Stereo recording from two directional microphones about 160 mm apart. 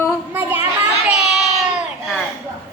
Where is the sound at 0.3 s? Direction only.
15° right (ahead or behind).